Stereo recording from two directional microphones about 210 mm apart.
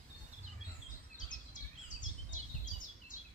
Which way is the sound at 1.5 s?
40° left (ahead or behind).